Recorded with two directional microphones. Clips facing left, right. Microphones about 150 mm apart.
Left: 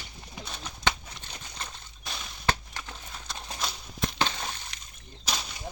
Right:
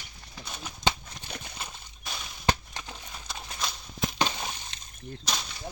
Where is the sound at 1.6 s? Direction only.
Centre (ahead or behind).